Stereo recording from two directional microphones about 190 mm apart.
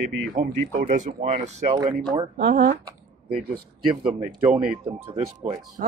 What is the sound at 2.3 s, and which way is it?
Speech, 60° right (ahead or behind).